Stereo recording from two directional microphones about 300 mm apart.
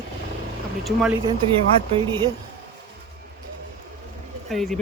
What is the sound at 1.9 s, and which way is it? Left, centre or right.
Speech, centre.